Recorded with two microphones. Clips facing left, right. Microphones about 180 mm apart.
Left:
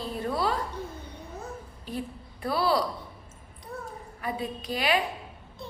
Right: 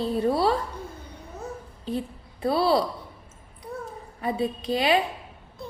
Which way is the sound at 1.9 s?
25° right (ahead or behind).